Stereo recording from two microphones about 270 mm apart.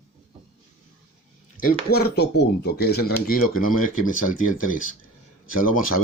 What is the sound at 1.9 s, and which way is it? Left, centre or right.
Speech, left.